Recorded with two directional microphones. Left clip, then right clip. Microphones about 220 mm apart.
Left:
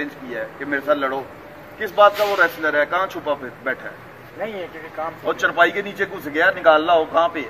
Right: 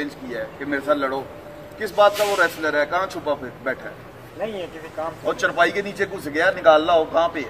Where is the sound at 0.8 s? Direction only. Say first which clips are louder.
Left 1 dB; 20° right (ahead or behind).